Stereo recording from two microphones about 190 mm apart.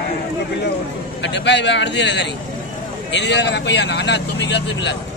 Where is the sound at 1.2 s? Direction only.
70° left (ahead or behind).